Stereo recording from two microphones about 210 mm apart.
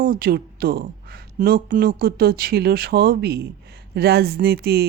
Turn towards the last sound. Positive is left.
turn(degrees=-50)  # may be behind; listen again after turning